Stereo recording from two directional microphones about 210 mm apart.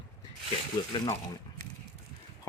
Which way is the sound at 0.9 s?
20° left (ahead or behind).